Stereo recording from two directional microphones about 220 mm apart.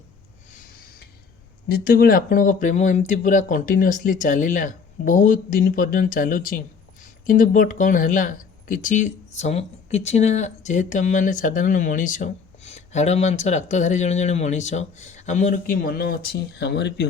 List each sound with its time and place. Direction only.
1.6 s speech: 45° left (ahead or behind)